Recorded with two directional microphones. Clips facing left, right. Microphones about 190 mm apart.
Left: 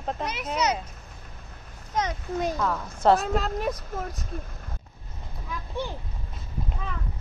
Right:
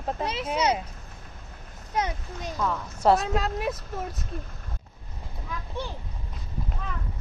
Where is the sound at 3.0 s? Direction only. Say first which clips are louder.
Left 1 dB; 5° right (ahead or behind).